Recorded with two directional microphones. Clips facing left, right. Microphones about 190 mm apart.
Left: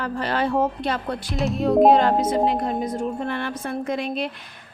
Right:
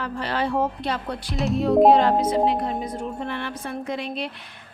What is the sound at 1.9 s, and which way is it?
A woman's voice, 45° left (ahead or behind).